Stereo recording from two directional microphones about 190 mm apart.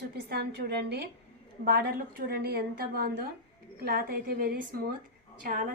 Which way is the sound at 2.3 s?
55° right (ahead or behind).